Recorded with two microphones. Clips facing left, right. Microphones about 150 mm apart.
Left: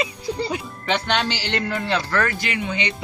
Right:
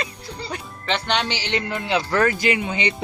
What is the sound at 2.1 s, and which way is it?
Speech, 25° right (ahead or behind).